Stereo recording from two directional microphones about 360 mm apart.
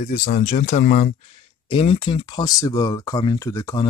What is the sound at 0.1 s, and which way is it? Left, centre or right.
Speech, left.